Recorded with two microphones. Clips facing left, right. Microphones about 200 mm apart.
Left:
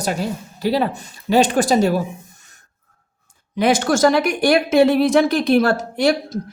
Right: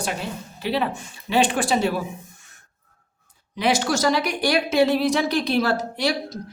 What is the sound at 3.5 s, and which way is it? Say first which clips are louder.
A woman's voice: left 5 dB; 50° left (ahead or behind).